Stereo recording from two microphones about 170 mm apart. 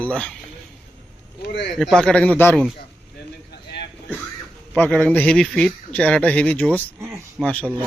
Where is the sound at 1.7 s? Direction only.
Centre (ahead or behind).